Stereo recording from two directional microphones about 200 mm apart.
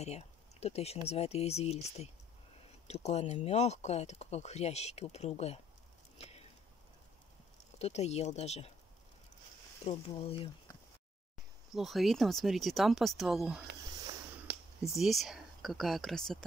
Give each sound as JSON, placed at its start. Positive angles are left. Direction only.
{"t": 0.0, "sound": "speech", "side_deg": 30}
{"t": 6.1, "sound": "a sound", "side_deg": 30}
{"t": 7.8, "sound": "speech", "side_deg": 35}
{"t": 9.8, "sound": "speech", "side_deg": 30}
{"t": 11.7, "sound": "speech", "side_deg": 0}
{"t": 14.5, "sound": "a sound", "side_deg": -55}
{"t": 14.9, "sound": "speech", "side_deg": 0}